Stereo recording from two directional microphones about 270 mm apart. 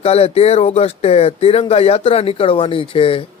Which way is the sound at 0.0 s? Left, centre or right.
Left.